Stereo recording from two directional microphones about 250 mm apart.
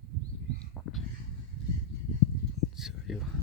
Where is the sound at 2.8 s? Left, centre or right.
Centre.